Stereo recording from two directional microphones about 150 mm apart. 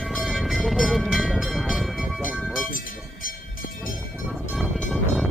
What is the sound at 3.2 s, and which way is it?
Train, 70° left (ahead or behind).